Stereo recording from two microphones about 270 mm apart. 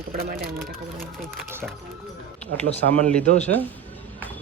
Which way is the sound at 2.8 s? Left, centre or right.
Right.